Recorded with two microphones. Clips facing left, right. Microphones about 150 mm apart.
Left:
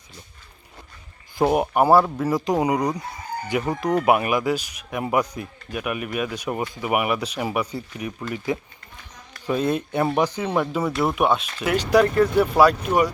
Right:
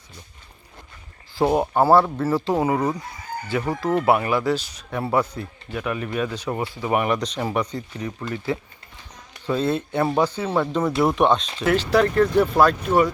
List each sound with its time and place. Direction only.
1.4 s speech: 15° left (ahead or behind)